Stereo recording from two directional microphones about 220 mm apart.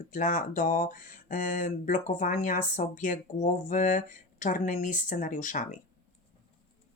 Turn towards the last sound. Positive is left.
turn(degrees=35)  # may be behind; listen again after turning